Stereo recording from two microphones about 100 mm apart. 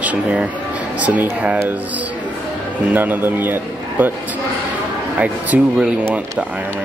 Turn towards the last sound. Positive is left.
turn(degrees=-10)  # may be behind; listen again after turning